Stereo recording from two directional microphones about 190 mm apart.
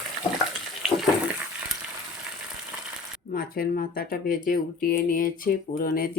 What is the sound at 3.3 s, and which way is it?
Speech, 50° left (ahead or behind).